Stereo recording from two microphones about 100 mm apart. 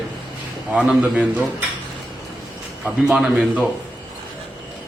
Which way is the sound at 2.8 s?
5° right (ahead or behind).